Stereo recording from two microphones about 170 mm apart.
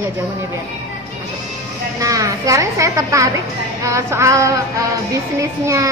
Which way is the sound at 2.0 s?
20° right (ahead or behind).